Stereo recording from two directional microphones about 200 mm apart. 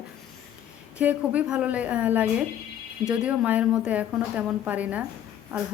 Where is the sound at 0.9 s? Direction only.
5° right (ahead or behind).